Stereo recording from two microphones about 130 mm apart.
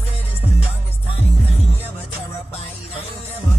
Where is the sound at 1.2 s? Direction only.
50° left (ahead or behind).